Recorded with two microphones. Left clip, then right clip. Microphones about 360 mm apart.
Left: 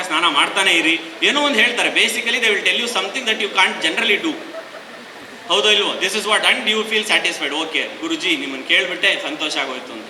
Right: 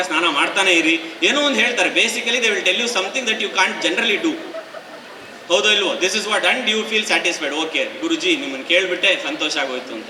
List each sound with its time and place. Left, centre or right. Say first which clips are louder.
0.0 s a man's voice: left 1 dB; centre
5.5 s a man's voice: left 1 dB; centre